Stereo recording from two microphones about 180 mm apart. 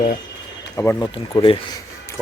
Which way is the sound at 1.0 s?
25° left (ahead or behind).